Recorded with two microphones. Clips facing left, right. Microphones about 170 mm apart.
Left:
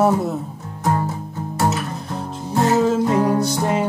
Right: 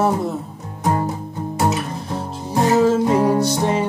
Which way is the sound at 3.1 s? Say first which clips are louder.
Right 1 dB; centre (ahead or behind).